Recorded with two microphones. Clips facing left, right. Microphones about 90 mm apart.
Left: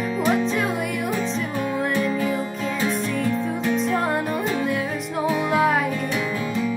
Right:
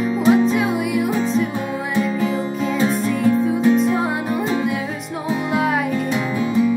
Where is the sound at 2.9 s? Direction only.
Centre (ahead or behind).